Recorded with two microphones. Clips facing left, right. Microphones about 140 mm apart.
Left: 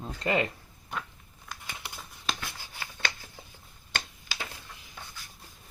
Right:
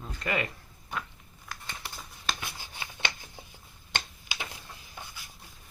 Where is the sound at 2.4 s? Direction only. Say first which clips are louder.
Even; 20° right (ahead or behind).